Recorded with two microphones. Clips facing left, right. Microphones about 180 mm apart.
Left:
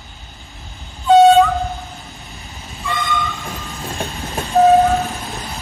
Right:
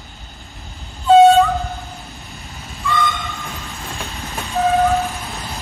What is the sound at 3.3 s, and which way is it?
Train, 15° left (ahead or behind).